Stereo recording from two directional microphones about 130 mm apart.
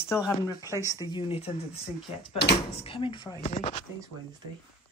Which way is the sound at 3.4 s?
55° left (ahead or behind).